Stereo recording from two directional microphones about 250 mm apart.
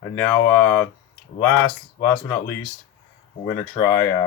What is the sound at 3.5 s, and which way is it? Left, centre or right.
Speech, left.